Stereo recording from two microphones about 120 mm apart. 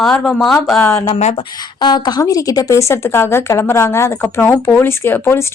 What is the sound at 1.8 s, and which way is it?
A woman's voice, 40° left (ahead or behind).